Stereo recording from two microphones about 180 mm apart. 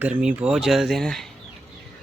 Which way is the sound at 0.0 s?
5° right (ahead or behind).